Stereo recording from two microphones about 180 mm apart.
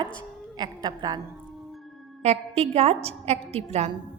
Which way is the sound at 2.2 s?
35° right (ahead or behind).